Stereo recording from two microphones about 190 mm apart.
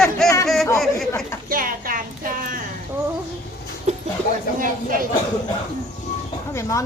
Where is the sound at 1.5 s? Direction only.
45° right (ahead or behind).